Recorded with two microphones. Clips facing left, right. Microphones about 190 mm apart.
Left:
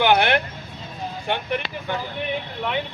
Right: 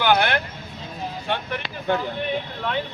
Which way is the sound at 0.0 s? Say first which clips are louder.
Left 2 dB; 20° left (ahead or behind).